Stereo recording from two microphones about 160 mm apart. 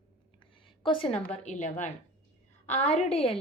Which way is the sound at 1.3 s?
45° left (ahead or behind).